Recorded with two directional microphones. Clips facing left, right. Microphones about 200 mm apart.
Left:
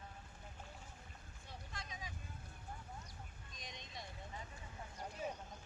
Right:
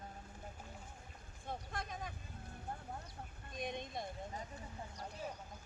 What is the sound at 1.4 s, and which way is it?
Boat, 55° right (ahead or behind).